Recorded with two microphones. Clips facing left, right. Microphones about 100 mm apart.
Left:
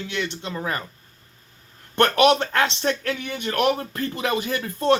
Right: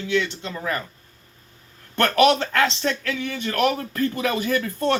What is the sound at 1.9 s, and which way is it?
Speech, 20° left (ahead or behind).